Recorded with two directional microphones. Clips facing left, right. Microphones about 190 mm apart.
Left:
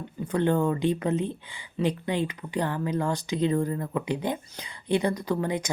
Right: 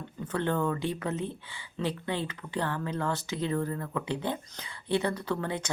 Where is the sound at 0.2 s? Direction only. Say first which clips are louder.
Left 5 dB; 15° left (ahead or behind).